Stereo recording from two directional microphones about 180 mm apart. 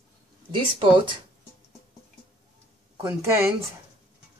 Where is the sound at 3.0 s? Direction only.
15° right (ahead or behind).